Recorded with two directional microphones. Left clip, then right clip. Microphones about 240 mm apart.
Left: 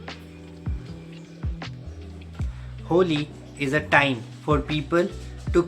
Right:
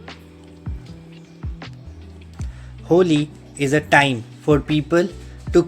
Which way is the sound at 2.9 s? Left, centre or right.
Right.